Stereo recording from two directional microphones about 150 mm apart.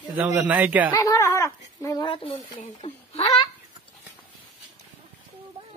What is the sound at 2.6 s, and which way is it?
Speech, 50° left (ahead or behind).